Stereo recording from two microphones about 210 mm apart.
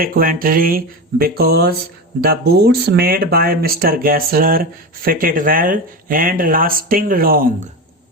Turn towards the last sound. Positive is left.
turn(degrees=-45)  # may be behind; listen again after turning